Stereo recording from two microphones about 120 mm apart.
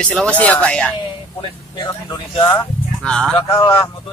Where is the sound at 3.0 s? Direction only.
5° left (ahead or behind).